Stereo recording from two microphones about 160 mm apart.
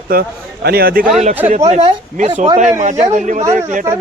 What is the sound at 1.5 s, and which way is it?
Speech, 45° right (ahead or behind).